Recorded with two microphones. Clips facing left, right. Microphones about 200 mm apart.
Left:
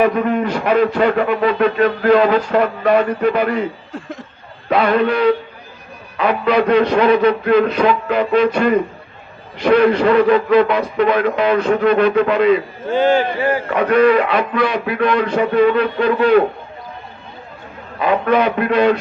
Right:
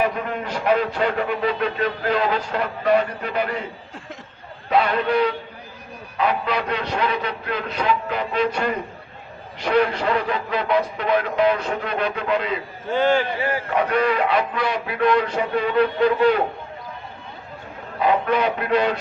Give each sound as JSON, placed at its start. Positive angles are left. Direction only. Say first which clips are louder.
{"t": 0.0, "sound": "a man's voice", "louder": "left 8 dB", "side_deg": 70}
{"t": 4.7, "sound": "a man's voice", "louder": "left 5 dB", "side_deg": 70}
{"t": 13.4, "sound": "speech", "louder": "left 7 dB", "side_deg": 50}
{"t": 13.7, "sound": "a man's voice", "louder": "left 8 dB", "side_deg": 75}
{"t": 18.0, "sound": "a man's voice", "louder": "left 4 dB", "side_deg": 75}